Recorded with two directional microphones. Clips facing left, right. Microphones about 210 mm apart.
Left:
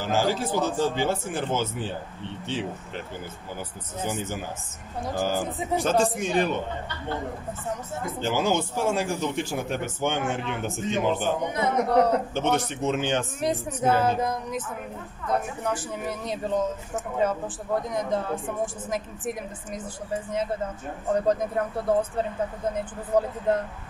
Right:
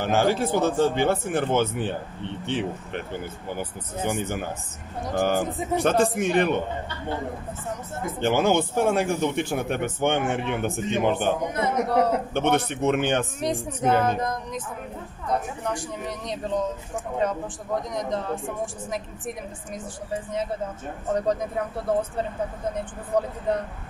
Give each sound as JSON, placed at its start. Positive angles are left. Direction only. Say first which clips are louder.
{"t": 0.0, "sound": "speech", "louder": "right 3 dB", "side_deg": -60}
{"t": 4.0, "sound": "speech", "louder": "right 3 dB", "side_deg": -60}
{"t": 8.2, "sound": "speech", "louder": "right 4 dB", "side_deg": -60}
{"t": 11.5, "sound": "speech", "louder": "left 1 dB", "side_deg": 0}
{"t": 12.4, "sound": "speech", "louder": "right 2 dB", "side_deg": -60}
{"t": 13.4, "sound": "speech", "louder": "even", "side_deg": 5}
{"t": 15.6, "sound": "speech", "louder": "left 1 dB", "side_deg": 5}
{"t": 21.1, "sound": "speech", "louder": "left 1 dB", "side_deg": 0}
{"t": 23.1, "sound": "speech", "louder": "left 1 dB", "side_deg": 5}